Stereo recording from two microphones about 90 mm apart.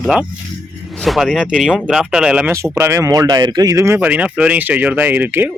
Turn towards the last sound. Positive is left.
turn(degrees=-20)  # may be behind; listen again after turning